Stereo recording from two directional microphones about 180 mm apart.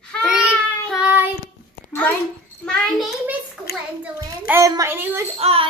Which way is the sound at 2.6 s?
5° left (ahead or behind).